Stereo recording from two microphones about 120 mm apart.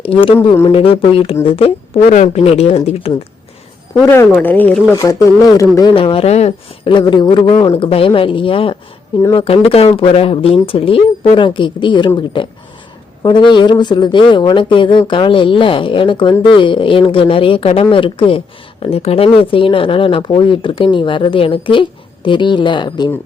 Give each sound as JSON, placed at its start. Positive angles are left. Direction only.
{"t": 0.0, "sound": "speech", "side_deg": 50}
{"t": 2.0, "sound": "speech", "side_deg": 80}
{"t": 4.0, "sound": "speech", "side_deg": 20}
{"t": 5.0, "sound": "speech", "side_deg": 25}
{"t": 5.9, "sound": "speech", "side_deg": 50}
{"t": 6.8, "sound": "speech", "side_deg": 40}